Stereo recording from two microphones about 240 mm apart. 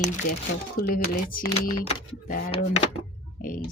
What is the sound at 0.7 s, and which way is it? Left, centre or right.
Speech, left.